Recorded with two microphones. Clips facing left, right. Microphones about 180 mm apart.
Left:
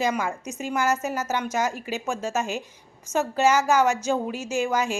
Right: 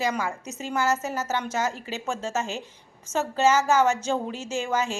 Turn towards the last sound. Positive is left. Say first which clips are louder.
# left 2 dB
turn(degrees=10)  # may be behind; listen again after turning